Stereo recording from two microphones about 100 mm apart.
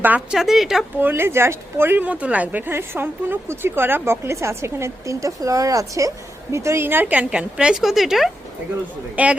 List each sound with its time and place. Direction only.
0.0 s a woman's voice: 15° right (ahead or behind)
0.3 s a woman's voice: 5° right (ahead or behind)
0.9 s speech: 20° right (ahead or behind); by 8.3 s centre (ahead or behind)
9.2 s a woman's voice: 15° right (ahead or behind)